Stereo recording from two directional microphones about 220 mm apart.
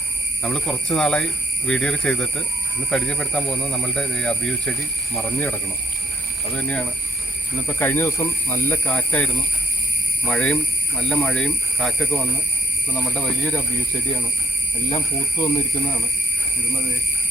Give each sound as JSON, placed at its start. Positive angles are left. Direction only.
{"t": 0.4, "sound": "speech", "side_deg": 5}
{"t": 6.6, "sound": "speech", "side_deg": 5}
{"t": 14.8, "sound": "speech", "side_deg": 20}